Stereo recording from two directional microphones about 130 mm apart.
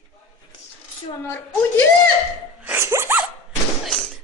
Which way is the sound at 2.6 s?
20° right (ahead or behind).